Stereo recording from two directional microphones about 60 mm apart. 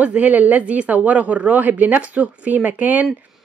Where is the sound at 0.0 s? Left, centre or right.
Right.